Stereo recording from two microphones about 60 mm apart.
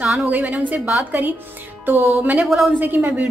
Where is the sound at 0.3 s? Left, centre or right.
Right.